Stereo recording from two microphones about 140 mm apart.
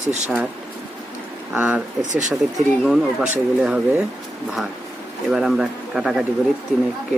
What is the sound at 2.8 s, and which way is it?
Speech, 5° right (ahead or behind).